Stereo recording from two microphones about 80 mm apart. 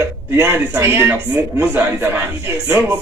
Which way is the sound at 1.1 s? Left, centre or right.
Centre.